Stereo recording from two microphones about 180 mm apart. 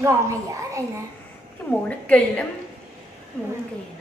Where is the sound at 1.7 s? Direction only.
5° left (ahead or behind).